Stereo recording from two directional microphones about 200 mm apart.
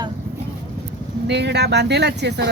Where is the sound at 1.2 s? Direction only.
55° right (ahead or behind).